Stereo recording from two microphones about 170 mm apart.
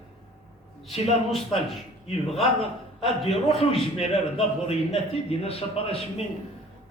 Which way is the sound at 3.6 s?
35° left (ahead or behind).